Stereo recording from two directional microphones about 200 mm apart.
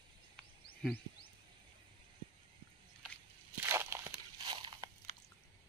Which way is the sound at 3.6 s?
10° right (ahead or behind).